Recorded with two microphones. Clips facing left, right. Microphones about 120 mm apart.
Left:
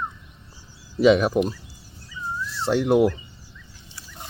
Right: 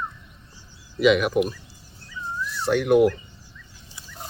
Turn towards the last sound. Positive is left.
turn(degrees=25)  # may be behind; listen again after turning